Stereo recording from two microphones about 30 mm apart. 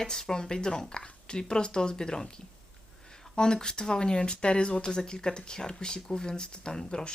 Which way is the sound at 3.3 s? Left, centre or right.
Left.